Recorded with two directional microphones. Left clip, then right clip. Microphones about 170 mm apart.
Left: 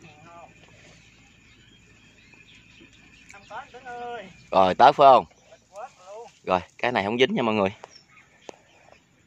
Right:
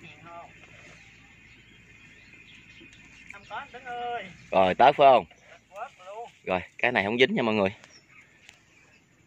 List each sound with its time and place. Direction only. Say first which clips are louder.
3.3 s speech: even; 5° right (ahead or behind)
4.5 s speech: left 3 dB; 15° left (ahead or behind)
5.8 s a sound: right 2 dB; 10° right (ahead or behind)
6.4 s speech: left 2 dB; 15° left (ahead or behind)